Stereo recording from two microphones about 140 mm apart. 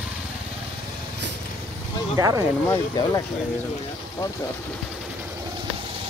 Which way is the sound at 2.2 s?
25° right (ahead or behind).